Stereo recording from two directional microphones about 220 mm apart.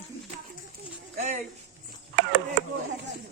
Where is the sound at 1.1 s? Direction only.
30° right (ahead or behind).